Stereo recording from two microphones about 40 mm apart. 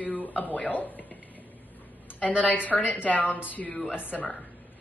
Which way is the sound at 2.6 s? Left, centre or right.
Left.